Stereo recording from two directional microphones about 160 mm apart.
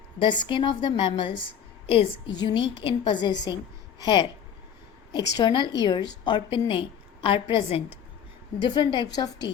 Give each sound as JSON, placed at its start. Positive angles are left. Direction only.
{"t": 0.2, "sound": "a woman's voice", "side_deg": 30}
{"t": 5.3, "sound": "a woman's voice", "side_deg": 30}